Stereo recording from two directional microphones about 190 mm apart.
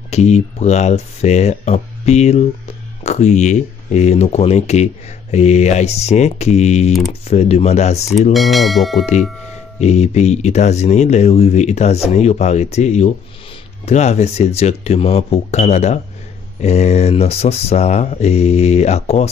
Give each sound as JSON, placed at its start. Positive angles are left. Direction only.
{"t": 0.1, "sound": "speech", "side_deg": 35}
{"t": 8.3, "sound": "speech", "side_deg": 0}
{"t": 9.8, "sound": "speech", "side_deg": 35}